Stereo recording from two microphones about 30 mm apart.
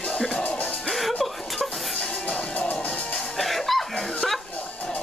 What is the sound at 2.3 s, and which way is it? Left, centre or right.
Music, left.